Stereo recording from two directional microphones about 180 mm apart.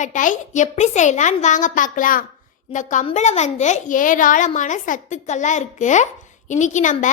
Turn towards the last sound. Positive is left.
turn(degrees=45)  # may be behind; listen again after turning